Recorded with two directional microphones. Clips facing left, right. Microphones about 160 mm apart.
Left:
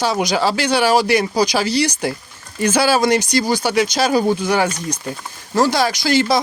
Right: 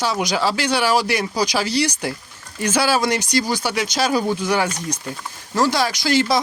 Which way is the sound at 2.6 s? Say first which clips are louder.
Left 4 dB; 45° left (ahead or behind).